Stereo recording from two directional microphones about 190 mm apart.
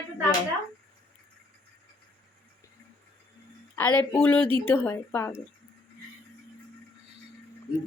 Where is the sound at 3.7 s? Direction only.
10° left (ahead or behind).